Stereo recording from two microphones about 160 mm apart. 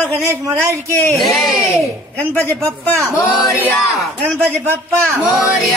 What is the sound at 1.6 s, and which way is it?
A man's voice, 20° left (ahead or behind).